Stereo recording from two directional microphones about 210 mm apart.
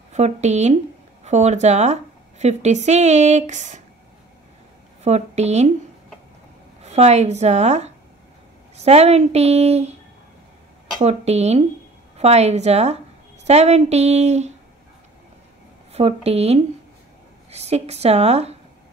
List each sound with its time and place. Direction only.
0.1 s a woman's voice: 30° right (ahead or behind)
5.0 s a woman's voice: 30° right (ahead or behind)
6.8 s a woman's voice: 30° right (ahead or behind)
11.0 s a woman's voice: 30° right (ahead or behind)
15.9 s speech: 30° right (ahead or behind)